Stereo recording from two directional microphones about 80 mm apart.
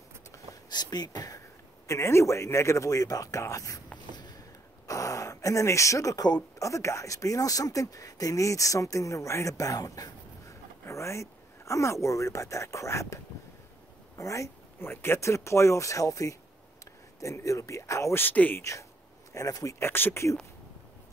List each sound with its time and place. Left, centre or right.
0.7 s speech: left
1.9 s speech: left
4.1 s a sound: left
4.8 s gasp: left
6.6 s speech: left
14.1 s a sound: left
14.9 s speech: left
18.2 s speech: left
18.6 s speech: left
19.8 s speech: left